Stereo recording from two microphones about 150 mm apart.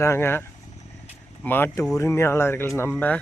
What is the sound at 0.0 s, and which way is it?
Speech, 15° left (ahead or behind).